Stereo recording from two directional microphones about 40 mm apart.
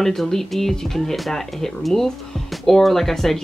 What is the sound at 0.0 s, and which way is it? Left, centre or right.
Speech, centre.